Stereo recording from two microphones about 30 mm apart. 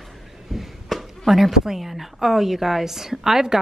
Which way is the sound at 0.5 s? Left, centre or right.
Centre.